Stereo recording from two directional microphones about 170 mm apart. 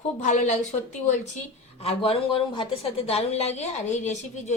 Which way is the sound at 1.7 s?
35° left (ahead or behind).